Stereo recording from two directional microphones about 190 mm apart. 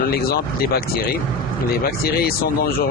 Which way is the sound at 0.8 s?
55° left (ahead or behind).